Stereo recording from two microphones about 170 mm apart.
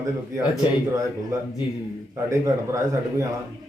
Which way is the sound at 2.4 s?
20° right (ahead or behind).